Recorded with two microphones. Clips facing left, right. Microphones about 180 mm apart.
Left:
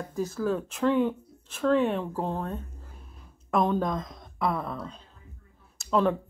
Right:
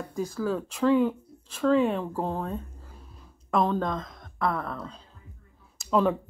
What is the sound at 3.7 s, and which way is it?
Speech, 15° left (ahead or behind).